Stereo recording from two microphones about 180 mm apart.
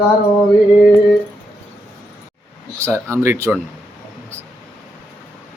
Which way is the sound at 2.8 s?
15° right (ahead or behind).